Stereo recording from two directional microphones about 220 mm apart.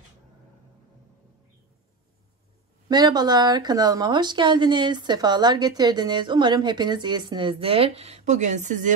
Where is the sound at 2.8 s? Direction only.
20° right (ahead or behind).